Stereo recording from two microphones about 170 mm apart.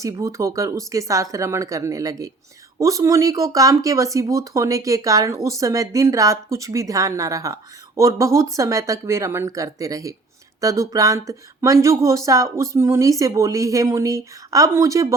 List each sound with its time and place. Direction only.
0.0 s speech: 20° right (ahead or behind)